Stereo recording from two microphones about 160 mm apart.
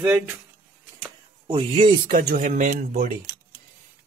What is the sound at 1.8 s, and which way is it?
Speech, 60° right (ahead or behind).